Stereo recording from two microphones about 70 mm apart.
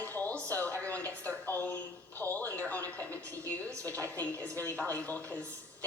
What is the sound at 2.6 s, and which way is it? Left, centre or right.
Television, left.